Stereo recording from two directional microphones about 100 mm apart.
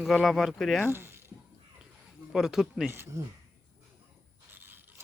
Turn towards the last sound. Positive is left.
turn(degrees=-20)  # may be behind; listen again after turning